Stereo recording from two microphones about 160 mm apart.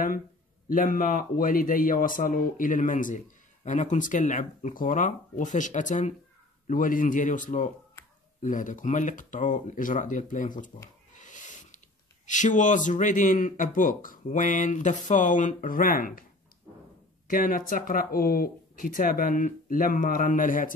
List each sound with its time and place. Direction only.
0.7 s a man's voice: 60° left (ahead or behind)
11.1 s a sound: 50° left (ahead or behind)
12.3 s speech: 50° left (ahead or behind)
17.3 s a man's voice: 60° left (ahead or behind)